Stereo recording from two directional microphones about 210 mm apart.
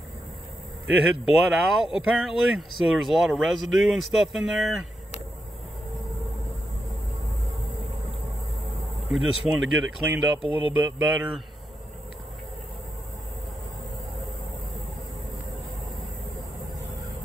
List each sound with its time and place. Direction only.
0.8 s speech: 5° right (ahead or behind)
9.1 s speech: centre (ahead or behind)
10.4 s speech: 25° left (ahead or behind)
10.8 s speech: 10° right (ahead or behind)